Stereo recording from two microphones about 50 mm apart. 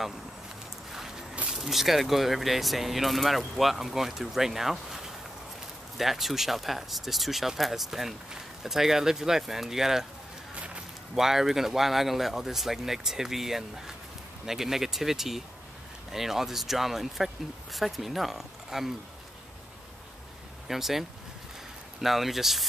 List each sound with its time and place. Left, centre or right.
1.5 s speech: centre
10.5 s walk: right
11.1 s speech: centre
20.6 s speech: centre
22.0 s speech: centre